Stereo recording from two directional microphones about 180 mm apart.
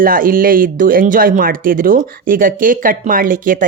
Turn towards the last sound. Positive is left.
turn(degrees=-50)  # may be behind; listen again after turning